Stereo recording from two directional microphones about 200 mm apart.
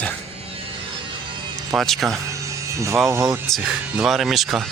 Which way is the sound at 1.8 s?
Centre (ahead or behind).